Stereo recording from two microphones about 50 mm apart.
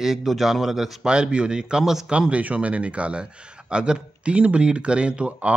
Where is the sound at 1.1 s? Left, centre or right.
Centre.